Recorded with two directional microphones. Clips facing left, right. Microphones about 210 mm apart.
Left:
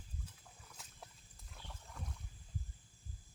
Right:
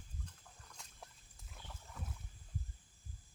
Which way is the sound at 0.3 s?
5° left (ahead or behind).